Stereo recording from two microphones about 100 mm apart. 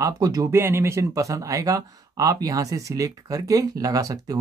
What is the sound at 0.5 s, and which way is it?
Speech, 25° right (ahead or behind).